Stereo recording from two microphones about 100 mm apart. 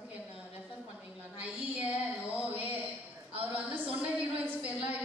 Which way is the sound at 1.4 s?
15° right (ahead or behind).